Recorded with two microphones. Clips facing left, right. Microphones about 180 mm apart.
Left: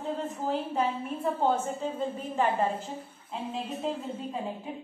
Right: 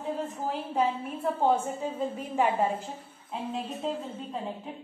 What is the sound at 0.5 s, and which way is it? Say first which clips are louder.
A woman's voice: even; 5° right (ahead or behind).